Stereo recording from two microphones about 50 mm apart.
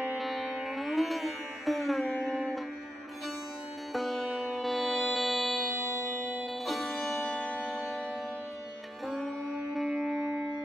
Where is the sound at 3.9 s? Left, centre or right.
Centre.